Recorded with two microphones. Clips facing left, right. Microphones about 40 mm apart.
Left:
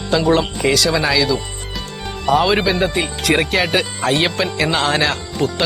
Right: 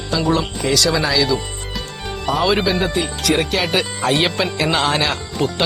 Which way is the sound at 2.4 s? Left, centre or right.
Centre.